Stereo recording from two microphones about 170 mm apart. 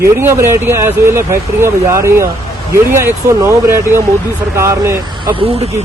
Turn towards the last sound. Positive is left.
turn(degrees=-35)  # may be behind; listen again after turning